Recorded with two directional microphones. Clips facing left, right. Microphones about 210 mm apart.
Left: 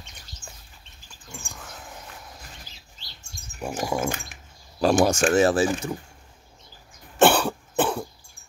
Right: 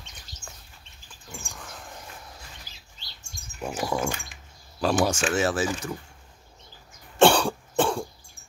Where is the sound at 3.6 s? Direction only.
5° left (ahead or behind).